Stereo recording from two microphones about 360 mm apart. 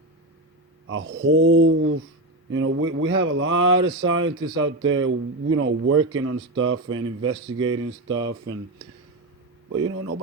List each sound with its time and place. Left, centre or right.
0.9 s speech: right
8.0 s speech: centre
9.6 s speech: right